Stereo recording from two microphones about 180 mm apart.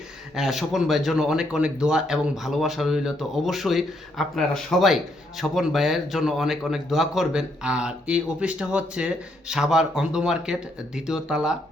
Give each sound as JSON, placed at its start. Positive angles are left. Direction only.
{"t": 0.3, "sound": "speech", "side_deg": 0}